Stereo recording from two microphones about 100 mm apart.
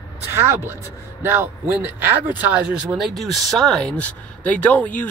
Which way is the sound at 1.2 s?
25° right (ahead or behind).